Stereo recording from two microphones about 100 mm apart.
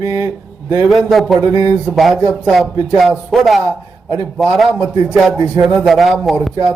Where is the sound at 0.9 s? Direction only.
Centre (ahead or behind).